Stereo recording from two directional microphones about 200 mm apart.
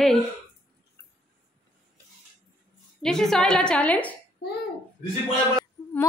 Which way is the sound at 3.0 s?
Centre (ahead or behind).